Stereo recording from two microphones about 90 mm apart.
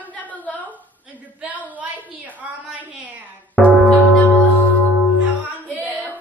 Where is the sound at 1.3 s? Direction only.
15° right (ahead or behind).